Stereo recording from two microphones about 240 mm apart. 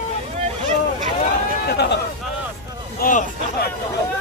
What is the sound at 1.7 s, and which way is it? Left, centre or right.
Speech, left.